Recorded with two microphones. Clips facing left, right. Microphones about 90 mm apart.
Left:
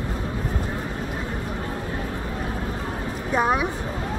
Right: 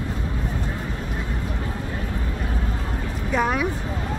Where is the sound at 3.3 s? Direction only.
40° left (ahead or behind).